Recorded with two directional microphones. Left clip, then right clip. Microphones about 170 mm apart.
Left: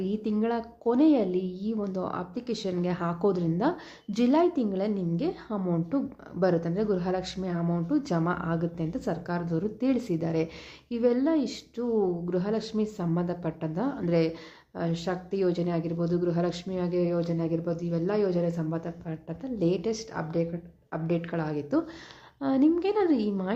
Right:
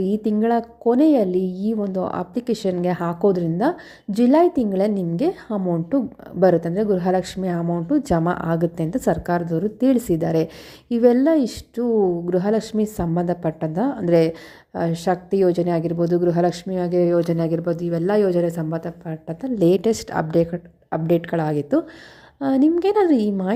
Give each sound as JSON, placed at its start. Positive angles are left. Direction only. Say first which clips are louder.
{"t": 0.0, "sound": "speech", "louder": "right 9 dB", "side_deg": -35}
{"t": 5.5, "sound": "a woman's voice", "louder": "right 8 dB", "side_deg": -20}
{"t": 6.4, "sound": "speech", "louder": "right 9 dB", "side_deg": -35}